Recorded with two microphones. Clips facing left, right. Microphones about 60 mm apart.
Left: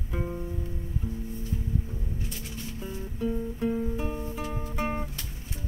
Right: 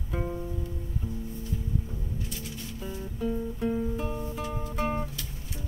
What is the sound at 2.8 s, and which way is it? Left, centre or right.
Music, centre.